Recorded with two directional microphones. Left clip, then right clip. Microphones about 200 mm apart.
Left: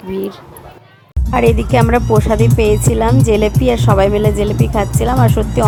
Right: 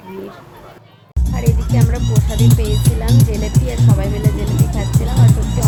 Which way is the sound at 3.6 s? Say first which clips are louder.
Left 13 dB; 40° left (ahead or behind).